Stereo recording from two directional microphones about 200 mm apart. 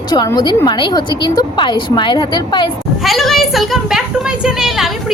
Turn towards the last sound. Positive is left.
turn(degrees=0)  # may be behind; listen again after turning